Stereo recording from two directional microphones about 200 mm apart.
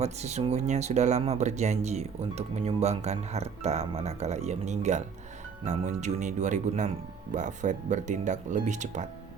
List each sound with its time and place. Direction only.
0.0 s speech: 35° right (ahead or behind)